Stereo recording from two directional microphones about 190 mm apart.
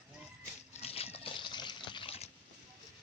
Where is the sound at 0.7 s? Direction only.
30° left (ahead or behind).